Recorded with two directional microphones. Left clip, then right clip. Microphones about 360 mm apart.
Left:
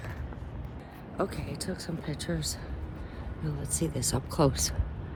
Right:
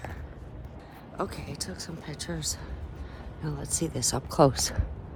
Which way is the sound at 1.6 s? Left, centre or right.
Centre.